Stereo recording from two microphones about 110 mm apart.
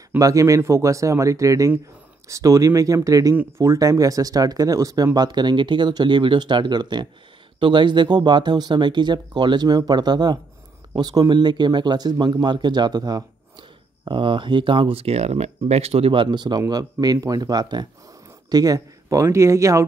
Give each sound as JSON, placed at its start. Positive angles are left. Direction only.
{"t": 0.2, "sound": "speech", "side_deg": -30}